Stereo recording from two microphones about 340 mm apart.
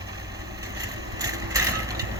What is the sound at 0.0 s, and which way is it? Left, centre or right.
Vehicle, centre.